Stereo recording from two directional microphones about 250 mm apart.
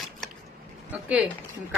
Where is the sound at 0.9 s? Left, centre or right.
Centre.